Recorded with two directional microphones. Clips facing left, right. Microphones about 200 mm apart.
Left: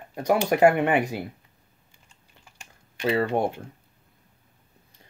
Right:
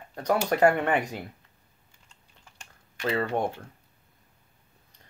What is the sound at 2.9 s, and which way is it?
Speech, 15° left (ahead or behind).